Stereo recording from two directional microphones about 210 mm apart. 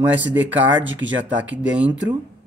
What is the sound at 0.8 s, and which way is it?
Speech, 60° right (ahead or behind).